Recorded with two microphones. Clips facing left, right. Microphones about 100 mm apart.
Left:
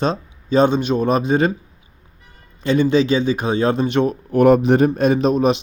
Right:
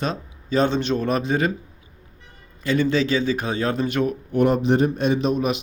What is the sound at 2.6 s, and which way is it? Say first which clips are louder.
A man's voice: left 5 dB; 20° left (ahead or behind).